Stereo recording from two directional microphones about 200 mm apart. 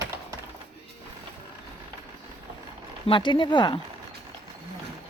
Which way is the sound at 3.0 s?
25° left (ahead or behind).